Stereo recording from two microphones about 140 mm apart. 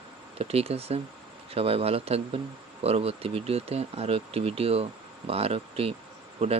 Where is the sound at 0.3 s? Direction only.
45° right (ahead or behind).